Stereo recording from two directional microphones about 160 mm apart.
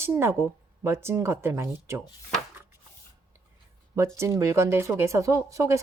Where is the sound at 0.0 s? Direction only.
15° right (ahead or behind).